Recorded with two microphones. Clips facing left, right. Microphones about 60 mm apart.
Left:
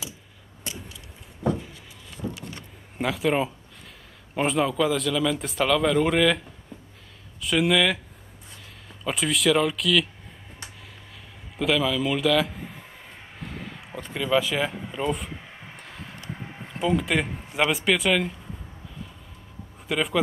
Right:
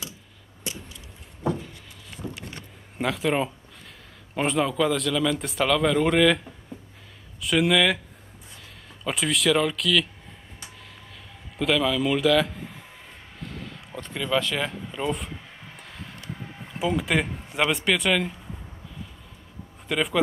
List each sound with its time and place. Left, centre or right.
3.0 s speech: centre
7.4 s speech: centre
9.0 s speech: centre
11.5 s a man's voice: centre
13.4 s a sound: centre
16.3 s a sound: centre
16.6 s speech: centre
19.9 s speech: centre